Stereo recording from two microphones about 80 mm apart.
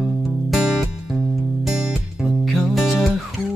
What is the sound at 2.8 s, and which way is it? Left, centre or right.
Music, centre.